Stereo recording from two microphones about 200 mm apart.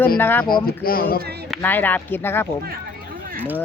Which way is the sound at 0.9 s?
45° left (ahead or behind).